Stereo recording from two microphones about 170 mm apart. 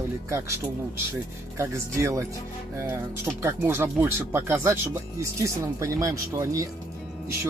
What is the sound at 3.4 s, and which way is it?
Speech, 15° right (ahead or behind).